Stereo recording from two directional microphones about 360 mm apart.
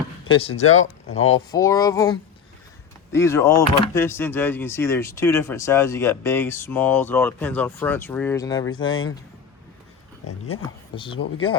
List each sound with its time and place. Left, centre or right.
0.3 s speech: centre
0.6 s speech: left
1.3 s speech: centre
10.2 s speech: left
10.9 s speech: centre